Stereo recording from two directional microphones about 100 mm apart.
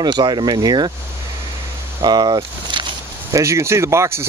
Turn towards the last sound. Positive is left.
turn(degrees=-25)  # may be behind; listen again after turning